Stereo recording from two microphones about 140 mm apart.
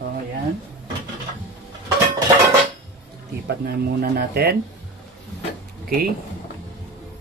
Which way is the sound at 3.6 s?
90° right.